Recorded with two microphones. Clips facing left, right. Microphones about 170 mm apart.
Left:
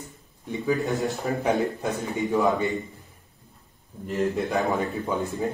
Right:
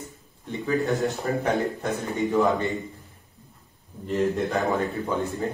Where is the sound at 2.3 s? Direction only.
Centre (ahead or behind).